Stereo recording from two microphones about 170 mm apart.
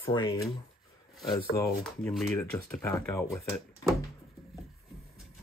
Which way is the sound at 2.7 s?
10° left (ahead or behind).